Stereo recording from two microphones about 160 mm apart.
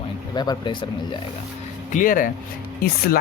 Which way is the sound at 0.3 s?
30° left (ahead or behind).